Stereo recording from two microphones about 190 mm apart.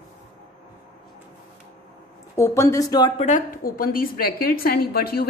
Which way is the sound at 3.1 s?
40° left (ahead or behind).